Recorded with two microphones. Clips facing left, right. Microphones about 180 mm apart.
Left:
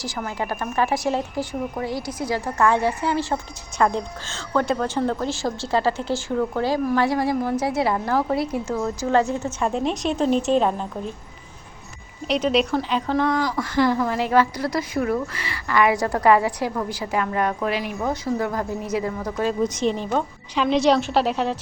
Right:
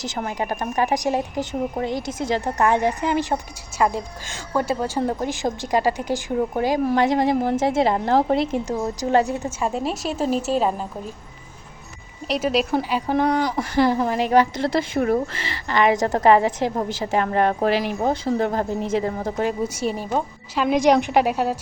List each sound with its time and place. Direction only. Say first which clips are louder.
0.3 s a woman's voice: right 1 dB; 15° right (ahead or behind)
9.6 s a woman's voice: left 3 dB; 5° right (ahead or behind)
12.3 s a woman's voice: left 1 dB; centre (ahead or behind)
12.7 s a woman's voice: right 1 dB; 15° right (ahead or behind)
19.6 s a woman's voice: left 2 dB; 10° right (ahead or behind)